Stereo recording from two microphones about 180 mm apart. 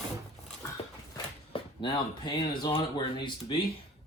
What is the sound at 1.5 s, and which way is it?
Speech, 25° left (ahead or behind).